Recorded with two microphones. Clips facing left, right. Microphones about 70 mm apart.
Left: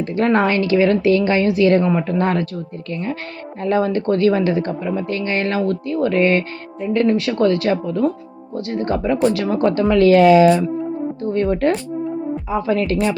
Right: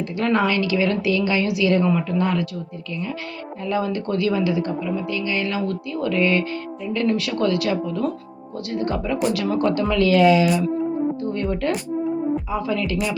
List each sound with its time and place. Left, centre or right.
0.0 s speech: left